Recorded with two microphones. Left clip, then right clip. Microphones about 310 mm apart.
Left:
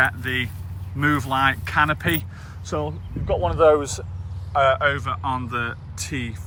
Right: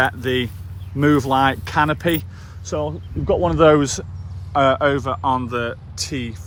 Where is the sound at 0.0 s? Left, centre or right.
Centre.